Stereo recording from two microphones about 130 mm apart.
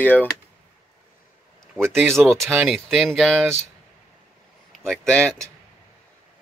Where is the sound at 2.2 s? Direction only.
Centre (ahead or behind).